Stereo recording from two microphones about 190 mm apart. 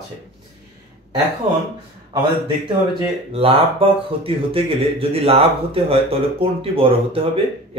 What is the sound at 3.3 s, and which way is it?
Speech, 30° right (ahead or behind).